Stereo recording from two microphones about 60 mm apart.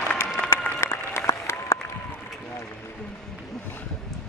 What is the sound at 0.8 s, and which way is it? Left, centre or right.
Applause, left.